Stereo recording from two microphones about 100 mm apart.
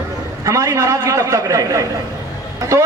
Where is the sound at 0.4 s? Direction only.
35° right (ahead or behind).